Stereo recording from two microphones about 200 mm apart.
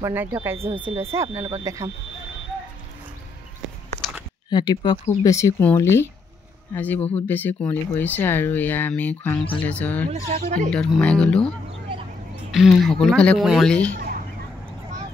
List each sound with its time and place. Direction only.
0.0 s speech: 10° right (ahead or behind)
4.5 s speech: 20° left (ahead or behind)
10.3 s speech: 40° right (ahead or behind)
10.7 s speech: 5° left (ahead or behind)